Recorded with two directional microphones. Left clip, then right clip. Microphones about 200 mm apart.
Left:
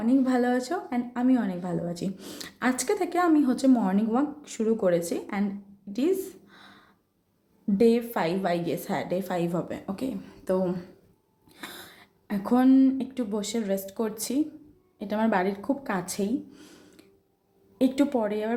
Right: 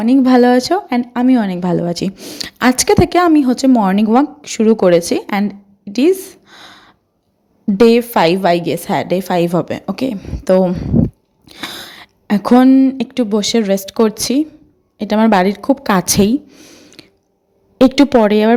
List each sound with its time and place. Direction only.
0.0 s a woman's voice: 40° right (ahead or behind)
16.5 s a sound: 35° right (ahead or behind)
17.7 s a woman's voice: 40° right (ahead or behind)